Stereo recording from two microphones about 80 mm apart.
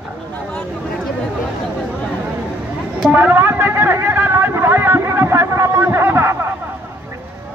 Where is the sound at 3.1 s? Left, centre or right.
Right.